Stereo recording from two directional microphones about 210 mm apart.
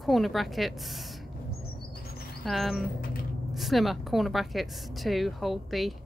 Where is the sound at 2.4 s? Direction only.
Centre (ahead or behind).